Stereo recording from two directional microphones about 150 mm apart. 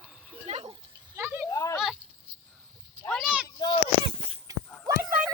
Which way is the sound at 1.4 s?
20° left (ahead or behind).